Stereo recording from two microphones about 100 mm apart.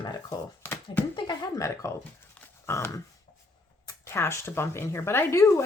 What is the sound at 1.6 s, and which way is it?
Speech, 30° left (ahead or behind).